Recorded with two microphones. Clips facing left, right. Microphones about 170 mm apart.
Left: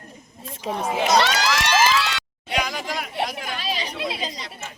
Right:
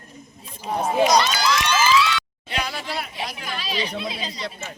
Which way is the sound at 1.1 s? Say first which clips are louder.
Even; 75° left (ahead or behind).